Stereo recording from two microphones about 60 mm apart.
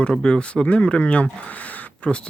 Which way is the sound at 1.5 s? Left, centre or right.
Left.